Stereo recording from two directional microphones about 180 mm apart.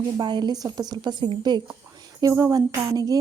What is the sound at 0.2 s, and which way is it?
A woman's voice, 25° right (ahead or behind).